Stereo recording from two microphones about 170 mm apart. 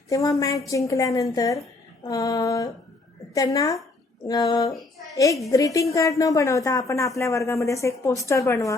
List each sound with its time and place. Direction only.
0.1 s a woman's voice: 20° left (ahead or behind)